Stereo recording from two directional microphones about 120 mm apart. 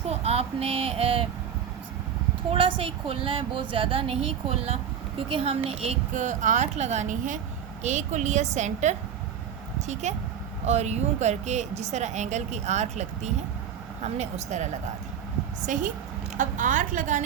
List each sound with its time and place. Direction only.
0.1 s speech: 60° right (ahead or behind)
2.5 s a woman's voice: 50° right (ahead or behind); by 14.7 s 70° right (ahead or behind)
15.6 s a woman's voice: 90° right